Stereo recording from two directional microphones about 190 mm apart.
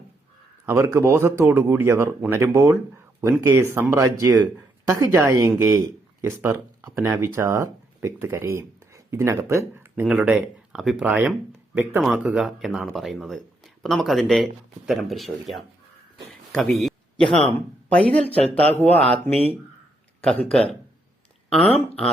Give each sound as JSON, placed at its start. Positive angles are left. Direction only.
{"t": 0.6, "sound": "speech", "side_deg": -15}
{"t": 16.5, "sound": "a sound", "side_deg": 5}
{"t": 17.3, "sound": "speech", "side_deg": 5}
{"t": 20.2, "sound": "speech", "side_deg": 5}